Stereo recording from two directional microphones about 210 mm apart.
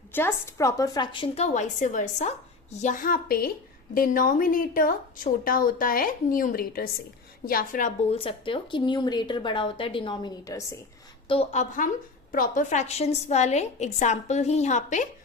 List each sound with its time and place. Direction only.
0.1 s a woman's voice: 10° left (ahead or behind)
11.3 s a woman's voice: 30° left (ahead or behind)